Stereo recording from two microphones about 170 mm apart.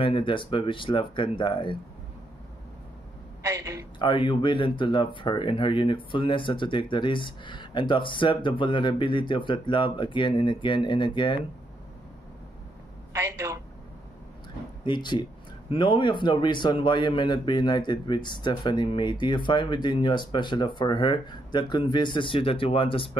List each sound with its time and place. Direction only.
0.0 s a man's voice: 30° left (ahead or behind)
3.4 s a woman's voice: 20° right (ahead or behind)
4.0 s a man's voice: 30° left (ahead or behind)
13.1 s a sound: 15° right (ahead or behind)
14.9 s a man's voice: 25° left (ahead or behind)